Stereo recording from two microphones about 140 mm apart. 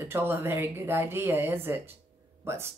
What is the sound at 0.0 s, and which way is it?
Speech, 15° right (ahead or behind).